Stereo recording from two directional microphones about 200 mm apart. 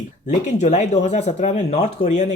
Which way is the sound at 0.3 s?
35° left (ahead or behind).